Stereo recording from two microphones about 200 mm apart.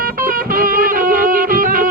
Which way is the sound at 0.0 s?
45° right (ahead or behind).